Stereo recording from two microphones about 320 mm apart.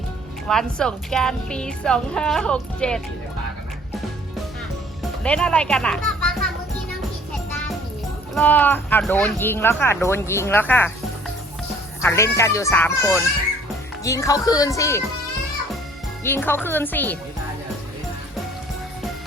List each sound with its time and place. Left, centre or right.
0.4 s a woman's voice: centre
5.2 s a woman's voice: centre
8.4 s speech: centre
12.0 s speech: centre
16.2 s speech: centre